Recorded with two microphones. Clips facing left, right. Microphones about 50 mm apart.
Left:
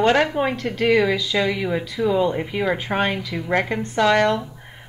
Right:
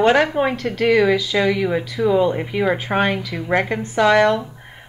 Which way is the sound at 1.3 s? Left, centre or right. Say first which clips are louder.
Right 3 dB; centre.